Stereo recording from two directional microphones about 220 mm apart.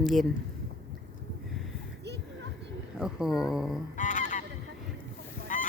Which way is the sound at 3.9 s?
35° left (ahead or behind).